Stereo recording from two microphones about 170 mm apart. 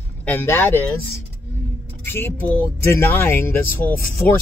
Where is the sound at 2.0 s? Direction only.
10° left (ahead or behind).